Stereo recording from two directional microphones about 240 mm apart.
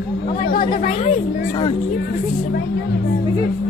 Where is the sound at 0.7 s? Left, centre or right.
Left.